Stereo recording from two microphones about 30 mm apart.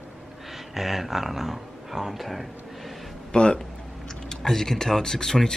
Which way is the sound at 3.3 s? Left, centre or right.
Left.